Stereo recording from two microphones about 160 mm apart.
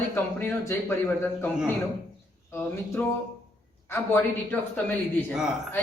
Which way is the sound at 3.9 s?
10° left (ahead or behind).